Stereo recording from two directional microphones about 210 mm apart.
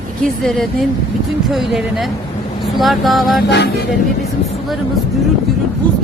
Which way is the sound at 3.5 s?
55° left (ahead or behind).